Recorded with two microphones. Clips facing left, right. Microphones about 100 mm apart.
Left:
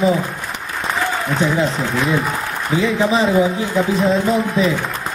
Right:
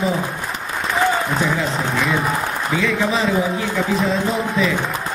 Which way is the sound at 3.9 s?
Centre (ahead or behind).